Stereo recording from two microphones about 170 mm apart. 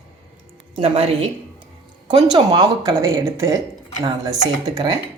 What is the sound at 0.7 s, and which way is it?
Speech, 35° right (ahead or behind).